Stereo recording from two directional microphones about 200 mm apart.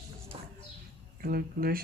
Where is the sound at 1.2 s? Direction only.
45° right (ahead or behind).